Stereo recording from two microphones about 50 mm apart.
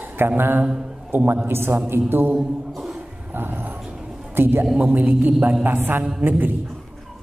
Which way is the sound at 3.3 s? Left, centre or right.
Right.